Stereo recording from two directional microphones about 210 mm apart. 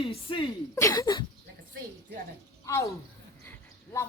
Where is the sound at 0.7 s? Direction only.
15° left (ahead or behind).